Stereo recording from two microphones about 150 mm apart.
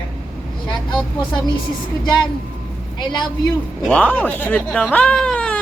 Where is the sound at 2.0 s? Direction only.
30° left (ahead or behind).